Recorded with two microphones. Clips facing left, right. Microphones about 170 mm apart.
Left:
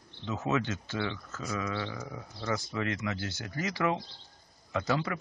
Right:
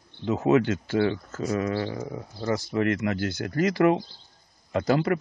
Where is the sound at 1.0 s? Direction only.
40° right (ahead or behind).